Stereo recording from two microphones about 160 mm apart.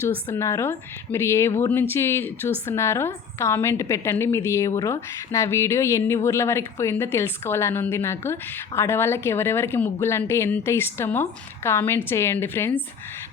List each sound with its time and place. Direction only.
0.0 s speech: 15° left (ahead or behind)